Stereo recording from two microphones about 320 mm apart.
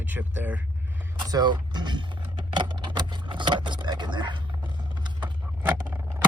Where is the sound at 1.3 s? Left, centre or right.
Centre.